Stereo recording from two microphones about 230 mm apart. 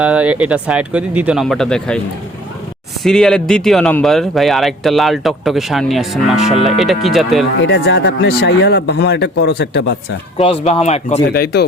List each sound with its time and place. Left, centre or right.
0.0 s speech: centre
3.0 s speech: centre
7.7 s speech: left
10.3 s speech: left